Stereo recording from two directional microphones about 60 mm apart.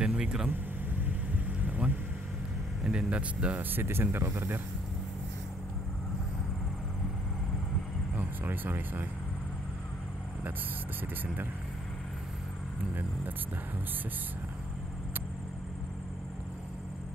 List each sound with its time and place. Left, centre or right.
0.0 s vehicle: centre
0.5 s vehicle: right
2.8 s speech: centre
3.7 s speech: right
8.2 s speech: right